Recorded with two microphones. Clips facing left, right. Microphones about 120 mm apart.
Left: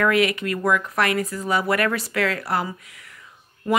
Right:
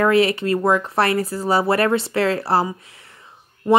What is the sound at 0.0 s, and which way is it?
Speech, 30° right (ahead or behind).